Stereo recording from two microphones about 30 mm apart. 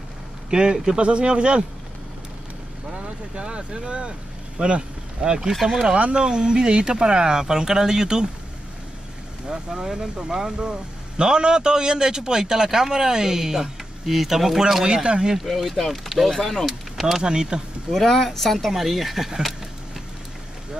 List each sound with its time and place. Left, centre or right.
0.5 s a man's voice: right
2.9 s speech: right
5.5 s speech: centre
6.1 s speech: right
9.5 s speech: centre
15.0 s speech: right
15.3 s speech: centre
17.2 s speech: right
17.9 s speech: centre